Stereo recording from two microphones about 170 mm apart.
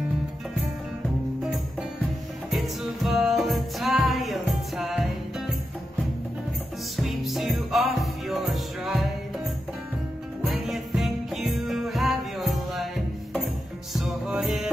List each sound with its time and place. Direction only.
1.4 s music: 5° right (ahead or behind)
7.0 s music: centre (ahead or behind)
10.4 s music: centre (ahead or behind)
13.9 s music: centre (ahead or behind)